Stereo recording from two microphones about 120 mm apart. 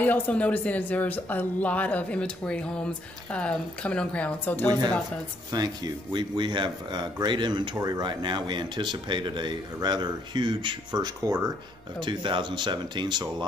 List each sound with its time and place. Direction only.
0.0 s speech: 15° left (ahead or behind)
4.6 s speech: 35° right (ahead or behind)